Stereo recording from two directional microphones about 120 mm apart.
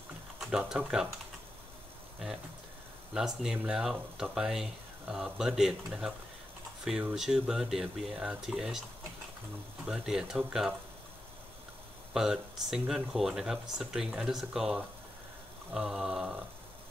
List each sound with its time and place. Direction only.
0.4 s speech: 5° right (ahead or behind)
3.2 s speech: 5° right (ahead or behind)
9.8 s speech: 5° right (ahead or behind)
12.1 s speech: 5° right (ahead or behind)